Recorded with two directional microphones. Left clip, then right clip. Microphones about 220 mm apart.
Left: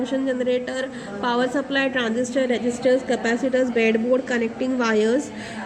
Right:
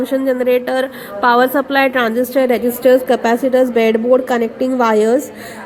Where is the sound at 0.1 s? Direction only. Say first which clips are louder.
Right 9 dB; 25° right (ahead or behind).